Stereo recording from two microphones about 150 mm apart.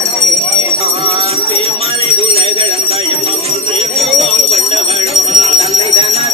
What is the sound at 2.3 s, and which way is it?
Bell, 40° right (ahead or behind).